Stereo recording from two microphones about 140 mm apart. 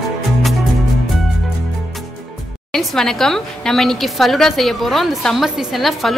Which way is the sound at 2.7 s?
5° left (ahead or behind).